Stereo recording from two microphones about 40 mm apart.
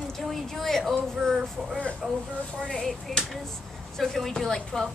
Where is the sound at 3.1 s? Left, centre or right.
Centre.